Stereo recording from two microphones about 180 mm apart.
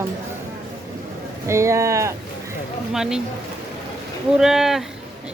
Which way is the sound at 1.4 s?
15° right (ahead or behind).